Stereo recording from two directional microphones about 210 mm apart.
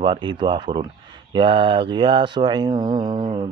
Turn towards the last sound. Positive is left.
turn(degrees=-30)  # may be behind; listen again after turning